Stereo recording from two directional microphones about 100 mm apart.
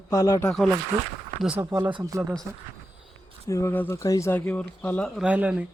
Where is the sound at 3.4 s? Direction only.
30° left (ahead or behind).